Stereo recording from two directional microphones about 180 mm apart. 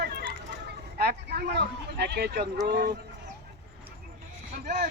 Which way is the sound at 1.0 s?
60° right (ahead or behind).